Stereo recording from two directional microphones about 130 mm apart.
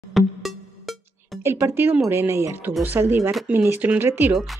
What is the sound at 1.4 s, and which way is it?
Speech, 20° right (ahead or behind).